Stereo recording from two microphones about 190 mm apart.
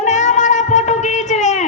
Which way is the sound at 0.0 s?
40° left (ahead or behind).